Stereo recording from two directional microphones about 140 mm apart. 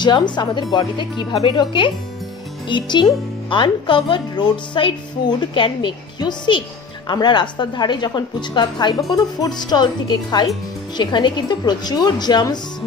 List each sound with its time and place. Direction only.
0.0 s speech: 30° left (ahead or behind)